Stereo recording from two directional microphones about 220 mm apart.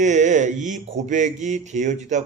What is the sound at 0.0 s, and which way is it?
Speech, 35° right (ahead or behind).